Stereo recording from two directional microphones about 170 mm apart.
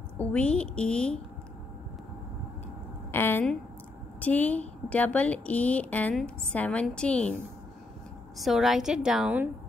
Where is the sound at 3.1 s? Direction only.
10° left (ahead or behind).